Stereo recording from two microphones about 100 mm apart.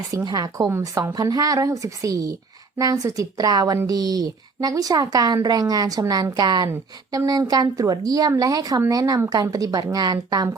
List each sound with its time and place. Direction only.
0.3 s a woman's voice: 40° right (ahead or behind)